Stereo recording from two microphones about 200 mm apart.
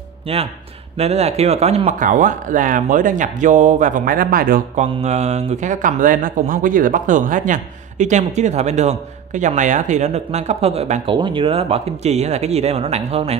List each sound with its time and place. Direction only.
0.3 s speech: 30° right (ahead or behind); by 4.8 s 45° right (ahead or behind)
4.8 s speech: 30° right (ahead or behind)